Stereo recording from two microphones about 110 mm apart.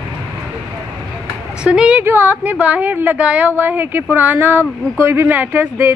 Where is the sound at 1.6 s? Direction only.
10° right (ahead or behind).